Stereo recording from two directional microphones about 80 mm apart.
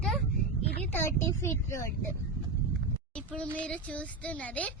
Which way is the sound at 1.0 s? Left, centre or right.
Left.